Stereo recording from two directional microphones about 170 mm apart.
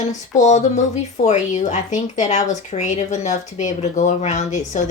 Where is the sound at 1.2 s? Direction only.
45° left (ahead or behind).